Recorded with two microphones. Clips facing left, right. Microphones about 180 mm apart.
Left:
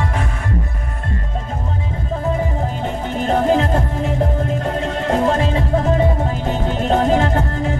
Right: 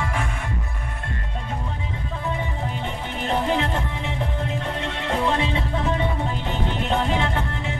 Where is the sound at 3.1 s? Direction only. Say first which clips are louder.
Left 7 dB; 45° left (ahead or behind).